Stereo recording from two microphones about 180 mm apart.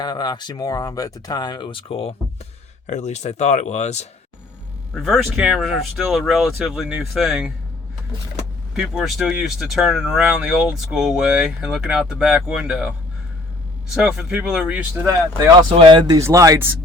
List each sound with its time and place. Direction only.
0.0 s speech: 25° left (ahead or behind); by 4.1 s 40° left (ahead or behind)
5.0 s speech: centre (ahead or behind)
8.7 s speech: 5° right (ahead or behind)
13.9 s speech: 5° right (ahead or behind)
15.7 s speech: 30° right (ahead or behind)